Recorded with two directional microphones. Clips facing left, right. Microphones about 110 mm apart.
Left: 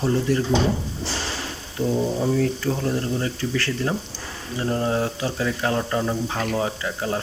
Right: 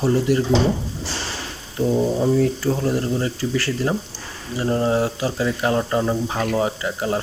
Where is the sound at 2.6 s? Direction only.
10° right (ahead or behind).